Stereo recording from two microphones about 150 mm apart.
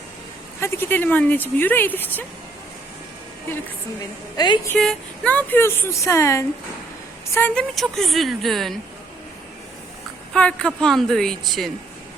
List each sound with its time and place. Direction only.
0.6 s speech: 15° left (ahead or behind)
4.4 s a woman's voice: 30° left (ahead or behind)
4.8 s a woman's voice: 5° left (ahead or behind)
10.3 s a woman's voice: 5° left (ahead or behind)